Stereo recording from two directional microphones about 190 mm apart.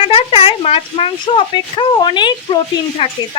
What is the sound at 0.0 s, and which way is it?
Speech, 30° left (ahead or behind).